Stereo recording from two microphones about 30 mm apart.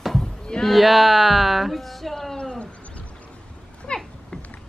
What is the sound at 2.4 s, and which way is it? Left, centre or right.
Bird, left.